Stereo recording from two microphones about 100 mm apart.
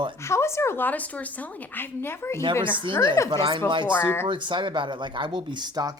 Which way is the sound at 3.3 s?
55° right (ahead or behind).